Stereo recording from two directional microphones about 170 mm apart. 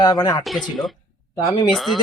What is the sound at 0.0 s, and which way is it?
Speech, 20° left (ahead or behind).